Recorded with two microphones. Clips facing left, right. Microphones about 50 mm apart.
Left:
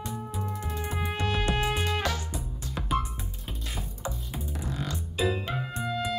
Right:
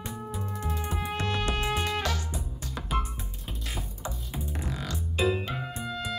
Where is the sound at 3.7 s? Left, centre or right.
Centre.